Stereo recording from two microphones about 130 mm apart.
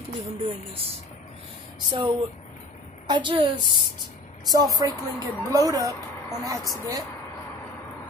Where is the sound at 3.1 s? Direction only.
40° right (ahead or behind).